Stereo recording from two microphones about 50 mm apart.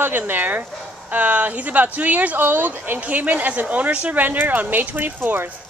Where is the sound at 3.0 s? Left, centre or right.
Right.